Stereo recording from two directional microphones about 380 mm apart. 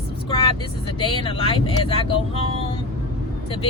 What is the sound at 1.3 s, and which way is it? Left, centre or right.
Speech, centre.